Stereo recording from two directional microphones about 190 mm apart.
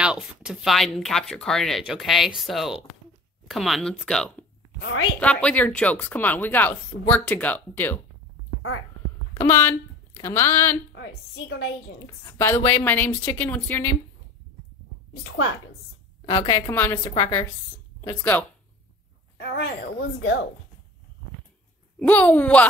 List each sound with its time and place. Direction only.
0.0 s speech: 5° right (ahead or behind)
4.7 s a woman's voice: 70° left (ahead or behind)
5.2 s speech: 5° left (ahead or behind)
9.3 s speech: 15° left (ahead or behind)
11.0 s a woman's voice: 65° left (ahead or behind)
12.3 s speech: 15° left (ahead or behind)
15.2 s a woman's voice: 90° left
16.3 s a woman's voice: 20° left (ahead or behind)
17.0 s a woman's voice: 25° left (ahead or behind)
19.3 s a woman's voice: 60° left (ahead or behind)
22.0 s speech: 10° left (ahead or behind)